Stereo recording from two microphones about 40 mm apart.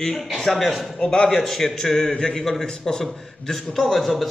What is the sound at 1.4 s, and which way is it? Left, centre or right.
A man's voice, centre.